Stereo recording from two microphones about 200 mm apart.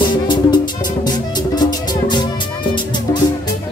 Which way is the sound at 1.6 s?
20° left (ahead or behind).